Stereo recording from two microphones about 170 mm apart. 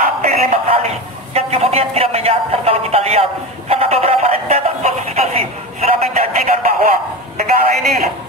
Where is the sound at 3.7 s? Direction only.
35° right (ahead or behind).